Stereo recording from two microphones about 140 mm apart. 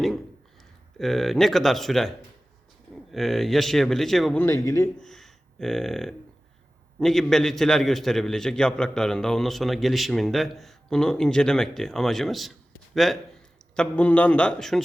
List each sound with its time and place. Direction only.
0.9 s a man's voice: centre (ahead or behind)
4.4 s speech: 20° left (ahead or behind)
4.9 s a man's voice: centre (ahead or behind)